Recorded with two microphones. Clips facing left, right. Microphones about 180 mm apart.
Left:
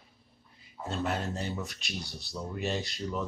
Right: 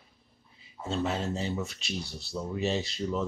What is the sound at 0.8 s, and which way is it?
Speech, centre (ahead or behind).